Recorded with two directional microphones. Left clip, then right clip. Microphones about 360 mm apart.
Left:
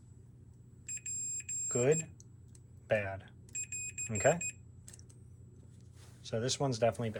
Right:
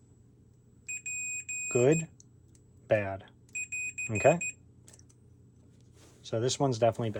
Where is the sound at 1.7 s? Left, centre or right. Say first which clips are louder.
Right 5 dB; right.